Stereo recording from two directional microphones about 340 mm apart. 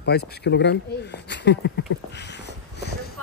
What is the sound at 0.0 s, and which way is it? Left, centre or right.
Speech, left.